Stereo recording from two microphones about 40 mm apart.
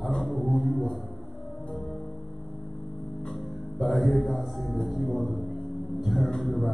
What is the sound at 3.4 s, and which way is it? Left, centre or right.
Music, centre.